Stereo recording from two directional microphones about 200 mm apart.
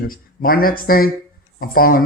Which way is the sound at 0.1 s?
45° left (ahead or behind).